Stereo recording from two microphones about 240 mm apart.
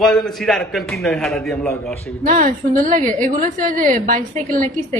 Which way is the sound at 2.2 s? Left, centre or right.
Right.